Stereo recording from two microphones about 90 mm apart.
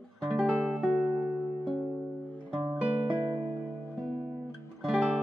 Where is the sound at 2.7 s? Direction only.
15° right (ahead or behind).